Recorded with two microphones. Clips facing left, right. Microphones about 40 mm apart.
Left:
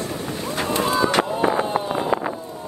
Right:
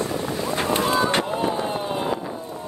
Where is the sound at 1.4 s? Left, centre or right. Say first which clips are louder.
Left 3 dB; left.